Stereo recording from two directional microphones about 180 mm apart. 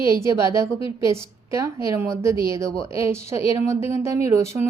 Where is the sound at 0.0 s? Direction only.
15° right (ahead or behind).